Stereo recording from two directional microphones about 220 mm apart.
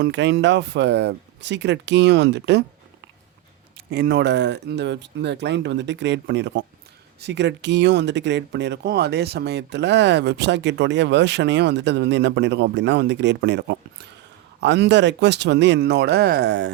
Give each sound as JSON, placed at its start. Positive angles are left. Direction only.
{"t": 0.0, "sound": "speech", "side_deg": -50}
{"t": 3.8, "sound": "speech", "side_deg": -50}